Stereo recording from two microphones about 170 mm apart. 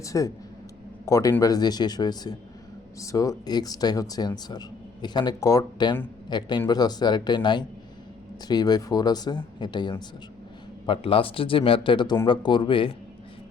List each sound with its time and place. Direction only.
0.0 s speech: 20° left (ahead or behind)